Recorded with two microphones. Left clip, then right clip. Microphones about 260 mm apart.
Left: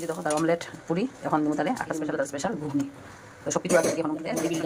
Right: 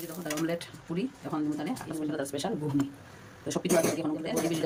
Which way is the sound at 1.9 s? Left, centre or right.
Centre.